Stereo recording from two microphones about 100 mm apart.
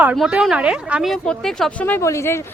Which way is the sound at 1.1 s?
5° left (ahead or behind).